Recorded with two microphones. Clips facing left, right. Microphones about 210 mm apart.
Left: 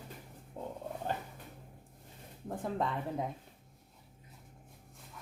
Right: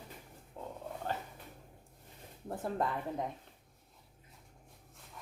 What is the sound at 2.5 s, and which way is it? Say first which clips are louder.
Speech: even; 5° right (ahead or behind).